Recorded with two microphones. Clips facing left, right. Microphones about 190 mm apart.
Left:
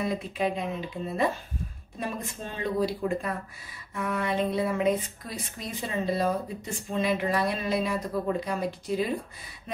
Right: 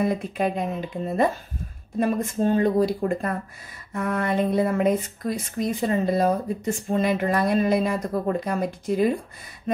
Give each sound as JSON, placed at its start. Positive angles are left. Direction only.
{"t": 0.0, "sound": "speech", "side_deg": -50}